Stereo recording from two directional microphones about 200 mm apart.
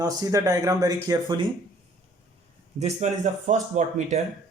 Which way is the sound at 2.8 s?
35° right (ahead or behind).